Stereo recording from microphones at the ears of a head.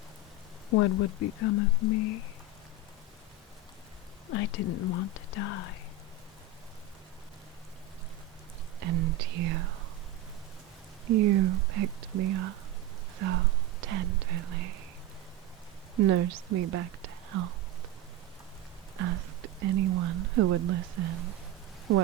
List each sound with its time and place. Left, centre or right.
0.7 s speech: left
4.3 s speech: left
8.8 s speech: right
11.0 s speech: right
16.0 s speech: right
18.9 s speech: right